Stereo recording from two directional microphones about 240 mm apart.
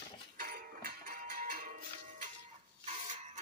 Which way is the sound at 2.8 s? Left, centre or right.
Right.